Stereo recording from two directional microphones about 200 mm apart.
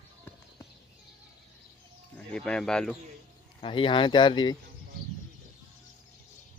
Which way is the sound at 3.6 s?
25° left (ahead or behind).